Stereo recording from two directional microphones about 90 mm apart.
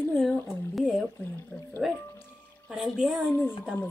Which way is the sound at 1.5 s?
Centre (ahead or behind).